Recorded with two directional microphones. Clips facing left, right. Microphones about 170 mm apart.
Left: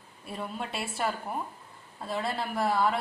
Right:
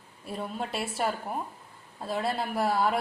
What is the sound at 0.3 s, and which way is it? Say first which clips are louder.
A woman's voice: right 2 dB; centre (ahead or behind).